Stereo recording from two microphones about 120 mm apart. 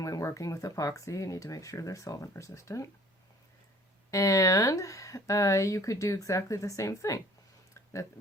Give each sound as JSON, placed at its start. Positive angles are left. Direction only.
{"t": 0.0, "sound": "speech", "side_deg": 25}
{"t": 4.1, "sound": "speech", "side_deg": 30}